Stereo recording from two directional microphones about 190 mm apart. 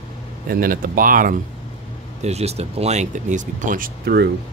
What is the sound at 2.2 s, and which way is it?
Speech, 35° right (ahead or behind).